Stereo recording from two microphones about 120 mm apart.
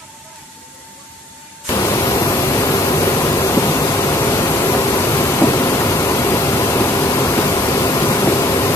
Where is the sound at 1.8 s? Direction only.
25° left (ahead or behind).